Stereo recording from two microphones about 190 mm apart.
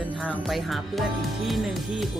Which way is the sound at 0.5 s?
Centre (ahead or behind).